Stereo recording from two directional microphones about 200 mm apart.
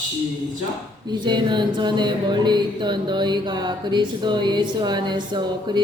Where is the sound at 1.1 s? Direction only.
20° right (ahead or behind).